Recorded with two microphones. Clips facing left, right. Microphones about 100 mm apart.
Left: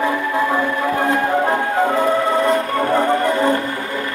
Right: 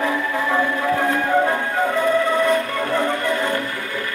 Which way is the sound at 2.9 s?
40° left (ahead or behind).